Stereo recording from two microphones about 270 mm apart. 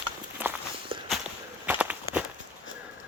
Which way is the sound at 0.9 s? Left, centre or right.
Centre.